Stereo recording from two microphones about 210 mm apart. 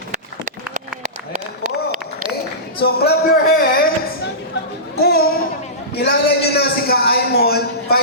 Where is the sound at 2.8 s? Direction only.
50° left (ahead or behind).